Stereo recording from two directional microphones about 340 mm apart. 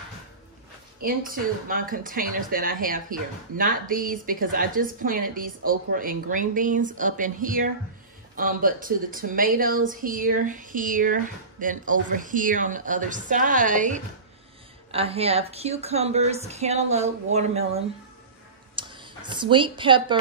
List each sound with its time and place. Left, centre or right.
1.0 s speech: right